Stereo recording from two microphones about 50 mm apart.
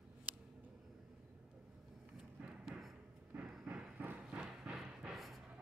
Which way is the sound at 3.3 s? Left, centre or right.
Right.